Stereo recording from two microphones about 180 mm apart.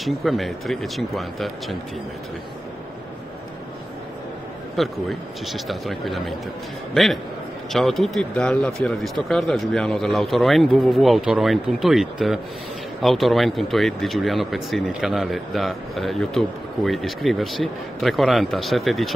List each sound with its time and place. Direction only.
0.0 s speech: centre (ahead or behind)
4.8 s speech: centre (ahead or behind)